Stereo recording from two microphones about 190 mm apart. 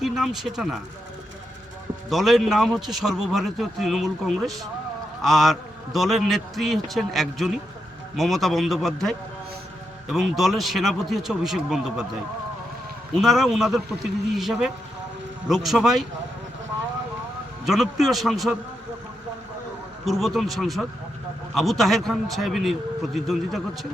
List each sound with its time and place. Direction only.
0.0 s a man's voice: centre (ahead or behind)
2.0 s a man's voice: centre (ahead or behind)
13.1 s a man's voice: centre (ahead or behind)
17.7 s a man's voice: centre (ahead or behind)
20.1 s a man's voice: centre (ahead or behind)